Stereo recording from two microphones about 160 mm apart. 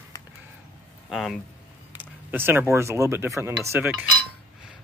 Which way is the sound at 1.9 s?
15° right (ahead or behind).